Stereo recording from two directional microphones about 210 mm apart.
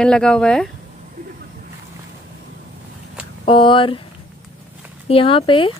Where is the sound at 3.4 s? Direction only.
25° left (ahead or behind).